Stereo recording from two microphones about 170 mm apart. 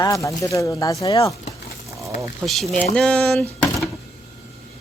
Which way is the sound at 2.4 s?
Centre (ahead or behind).